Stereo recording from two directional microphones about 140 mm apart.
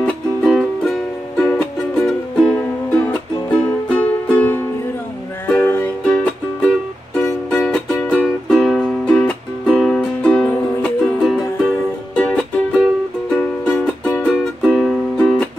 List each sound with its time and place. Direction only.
0.0 s music: centre (ahead or behind)